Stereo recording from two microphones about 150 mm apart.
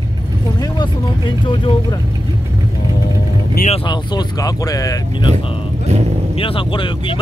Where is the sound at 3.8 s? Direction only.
30° left (ahead or behind).